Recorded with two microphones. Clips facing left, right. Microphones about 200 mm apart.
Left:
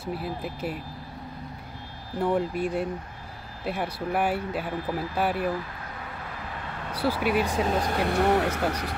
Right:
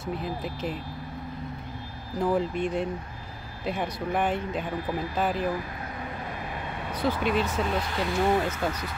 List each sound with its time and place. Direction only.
0.0 s speech: 5° left (ahead or behind)
2.2 s speech: 5° left (ahead or behind)
6.9 s speech: 10° left (ahead or behind)
7.6 s speech: 40° left (ahead or behind); by 8.9 s 70° left (ahead or behind)